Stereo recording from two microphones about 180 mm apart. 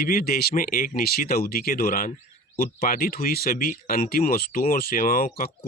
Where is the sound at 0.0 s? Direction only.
55° left (ahead or behind).